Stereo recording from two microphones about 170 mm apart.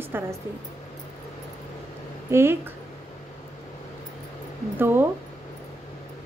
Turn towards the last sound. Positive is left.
turn(degrees=-15)  # may be behind; listen again after turning